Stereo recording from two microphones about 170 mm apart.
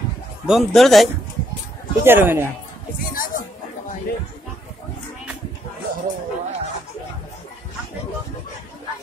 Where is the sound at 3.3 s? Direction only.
50° left (ahead or behind).